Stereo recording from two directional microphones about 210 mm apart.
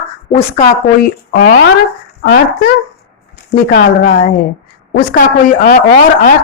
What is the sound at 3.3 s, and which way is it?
Speech, 50° left (ahead or behind).